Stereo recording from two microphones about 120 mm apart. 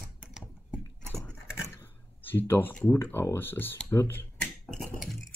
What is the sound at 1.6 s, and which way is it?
Speech, 20° left (ahead or behind).